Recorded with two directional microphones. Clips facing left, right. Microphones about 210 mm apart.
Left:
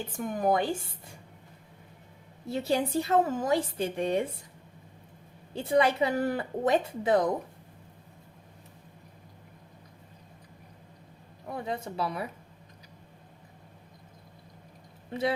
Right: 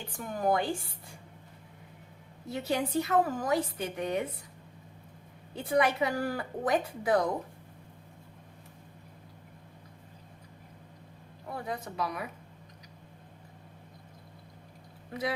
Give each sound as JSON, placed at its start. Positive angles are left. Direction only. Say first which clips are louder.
{"t": 0.1, "sound": "a woman's voice", "louder": "left 2 dB", "side_deg": 20}
{"t": 2.5, "sound": "a woman's voice", "louder": "left 3 dB", "side_deg": 30}
{"t": 5.5, "sound": "a woman's voice", "louder": "left 3 dB", "side_deg": 25}
{"t": 11.5, "sound": "a woman's voice", "louder": "left 3 dB", "side_deg": 25}